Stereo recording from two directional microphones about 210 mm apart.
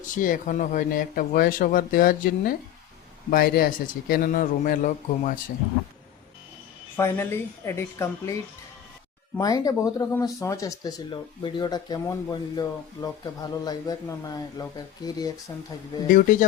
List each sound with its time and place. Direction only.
0.0 s speech: 40° left (ahead or behind)
6.9 s speech: 10° left (ahead or behind)
9.4 s speech: 15° left (ahead or behind)